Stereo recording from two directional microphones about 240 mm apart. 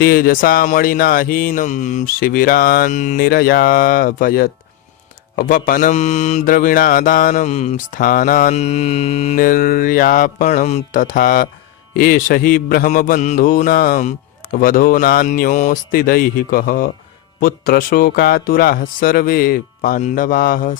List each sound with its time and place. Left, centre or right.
0.0 s mantra: left